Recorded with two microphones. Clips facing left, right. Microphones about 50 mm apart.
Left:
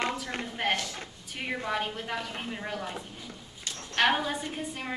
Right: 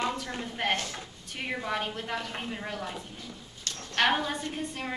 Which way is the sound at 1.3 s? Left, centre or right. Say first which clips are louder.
Even; centre.